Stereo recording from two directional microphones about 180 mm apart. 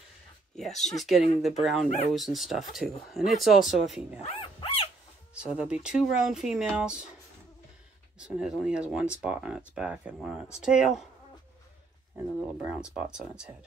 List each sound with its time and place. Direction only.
0.6 s speech: centre (ahead or behind)
4.2 s dog: 30° left (ahead or behind)
5.3 s speech: 5° right (ahead or behind)
8.2 s speech: 5° right (ahead or behind)
12.4 s speech: 5° right (ahead or behind)